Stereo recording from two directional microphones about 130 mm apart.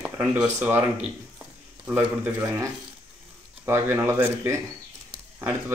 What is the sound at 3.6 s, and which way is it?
A man's voice, 20° right (ahead or behind).